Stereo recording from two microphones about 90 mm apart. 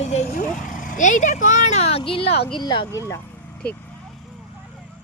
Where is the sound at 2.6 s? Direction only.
55° left (ahead or behind).